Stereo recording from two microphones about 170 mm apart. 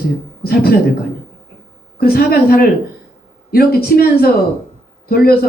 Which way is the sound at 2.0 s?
60° left (ahead or behind).